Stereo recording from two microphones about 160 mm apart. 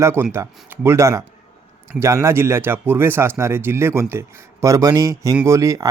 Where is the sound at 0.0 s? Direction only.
15° right (ahead or behind).